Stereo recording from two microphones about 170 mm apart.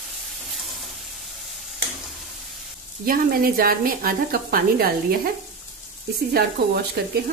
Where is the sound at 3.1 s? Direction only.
60° right (ahead or behind).